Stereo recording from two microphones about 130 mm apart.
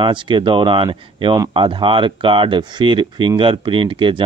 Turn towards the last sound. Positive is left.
turn(degrees=-40)  # may be behind; listen again after turning